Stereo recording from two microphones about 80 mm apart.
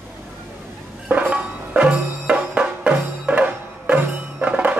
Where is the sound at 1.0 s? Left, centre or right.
Centre.